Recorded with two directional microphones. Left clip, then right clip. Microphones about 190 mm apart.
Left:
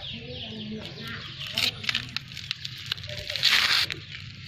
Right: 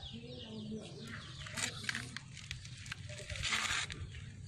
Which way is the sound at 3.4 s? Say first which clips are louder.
Left 15 dB; 10° right (ahead or behind).